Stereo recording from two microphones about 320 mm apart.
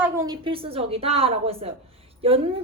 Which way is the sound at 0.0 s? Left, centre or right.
Centre.